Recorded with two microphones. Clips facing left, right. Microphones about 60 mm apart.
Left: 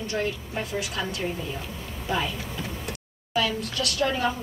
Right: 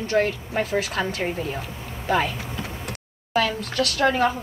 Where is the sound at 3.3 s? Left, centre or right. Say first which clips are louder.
Right 4 dB; right.